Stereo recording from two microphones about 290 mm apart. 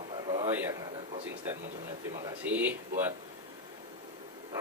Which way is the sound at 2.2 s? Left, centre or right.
Centre.